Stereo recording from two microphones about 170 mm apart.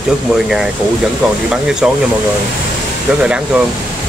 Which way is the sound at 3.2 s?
5° right (ahead or behind).